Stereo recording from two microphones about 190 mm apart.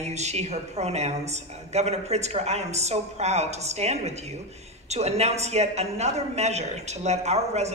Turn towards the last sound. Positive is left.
turn(degrees=-35)  # may be behind; listen again after turning